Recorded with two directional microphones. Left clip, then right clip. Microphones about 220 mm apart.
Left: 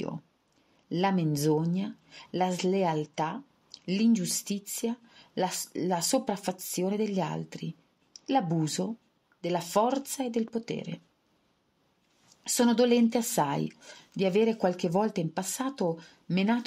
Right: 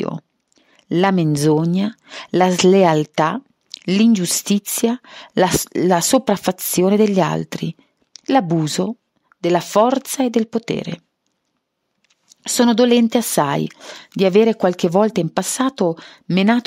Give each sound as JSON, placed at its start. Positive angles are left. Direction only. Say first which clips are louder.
{"t": 0.8, "sound": "speech", "louder": "right 12 dB", "side_deg": -50}
{"t": 12.4, "sound": "speech", "louder": "right 10 dB", "side_deg": -45}